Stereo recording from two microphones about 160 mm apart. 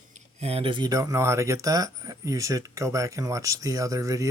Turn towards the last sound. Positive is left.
turn(degrees=-20)  # may be behind; listen again after turning